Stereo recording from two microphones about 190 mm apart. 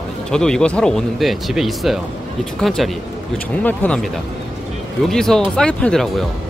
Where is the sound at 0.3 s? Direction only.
5° left (ahead or behind).